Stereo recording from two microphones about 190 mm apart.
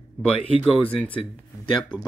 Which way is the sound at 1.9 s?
25° left (ahead or behind).